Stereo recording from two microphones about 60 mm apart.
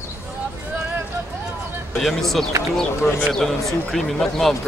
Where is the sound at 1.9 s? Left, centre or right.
Centre.